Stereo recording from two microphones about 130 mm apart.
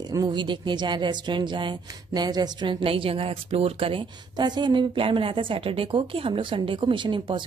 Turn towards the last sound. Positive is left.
turn(degrees=-40)  # may be behind; listen again after turning